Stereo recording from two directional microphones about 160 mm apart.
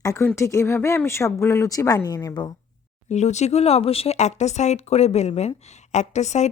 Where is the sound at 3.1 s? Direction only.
45° left (ahead or behind).